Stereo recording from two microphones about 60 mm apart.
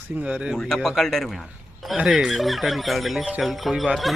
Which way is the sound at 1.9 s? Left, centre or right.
Centre.